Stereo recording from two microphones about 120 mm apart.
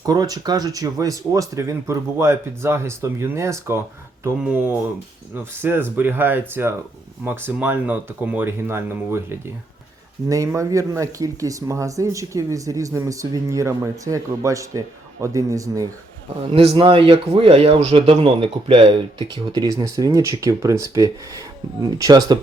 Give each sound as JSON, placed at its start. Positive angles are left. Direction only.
{"t": 0.0, "sound": "speech", "side_deg": -30}
{"t": 10.2, "sound": "speech", "side_deg": -25}
{"t": 16.5, "sound": "a man's voice", "side_deg": -55}
{"t": 16.7, "sound": "speech", "side_deg": -45}